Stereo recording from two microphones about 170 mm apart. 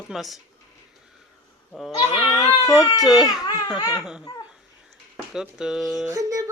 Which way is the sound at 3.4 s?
20° left (ahead or behind).